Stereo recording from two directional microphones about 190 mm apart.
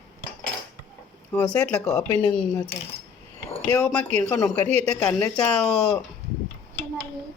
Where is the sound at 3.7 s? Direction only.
5° left (ahead or behind).